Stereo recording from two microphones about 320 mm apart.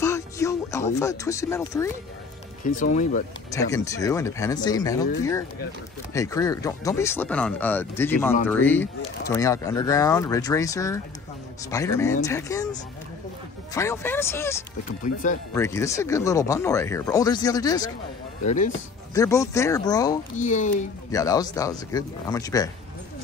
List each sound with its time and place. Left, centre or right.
0.0 s speech: centre
2.6 s speech: left
3.5 s speech: centre
6.1 s speech: centre
13.7 s speech: centre
19.1 s speech: centre
20.3 s speech: left
21.1 s speech: centre